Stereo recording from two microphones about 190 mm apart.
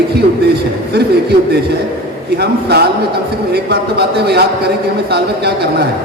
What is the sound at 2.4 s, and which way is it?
Speech, 60° right (ahead or behind).